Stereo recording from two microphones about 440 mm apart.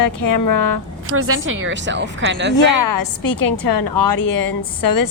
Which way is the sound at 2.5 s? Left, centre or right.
Left.